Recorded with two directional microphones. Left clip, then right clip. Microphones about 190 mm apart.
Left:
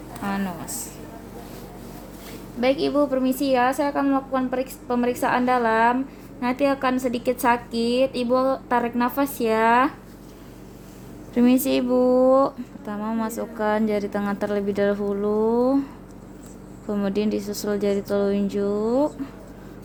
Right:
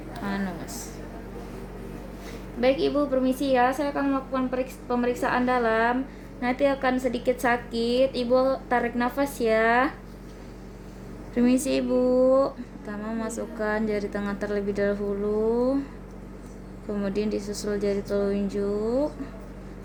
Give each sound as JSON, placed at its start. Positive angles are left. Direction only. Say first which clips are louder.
{"t": 0.2, "sound": "a sound", "louder": "left 3 dB", "side_deg": 40}
{"t": 2.6, "sound": "a woman's voice", "louder": "left 2 dB", "side_deg": 40}
{"t": 11.3, "sound": "a woman's voice", "louder": "left 3 dB", "side_deg": 45}
{"t": 16.9, "sound": "a woman's voice", "louder": "left 3 dB", "side_deg": 45}